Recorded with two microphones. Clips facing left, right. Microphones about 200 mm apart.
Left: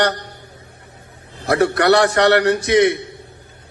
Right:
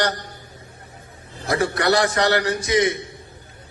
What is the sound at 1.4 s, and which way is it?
A man's voice, 65° left (ahead or behind).